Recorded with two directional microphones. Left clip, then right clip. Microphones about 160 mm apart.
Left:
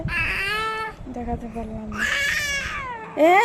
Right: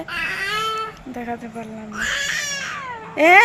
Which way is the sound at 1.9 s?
25° left (ahead or behind).